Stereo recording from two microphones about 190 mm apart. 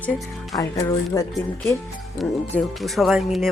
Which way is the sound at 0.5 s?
20° left (ahead or behind).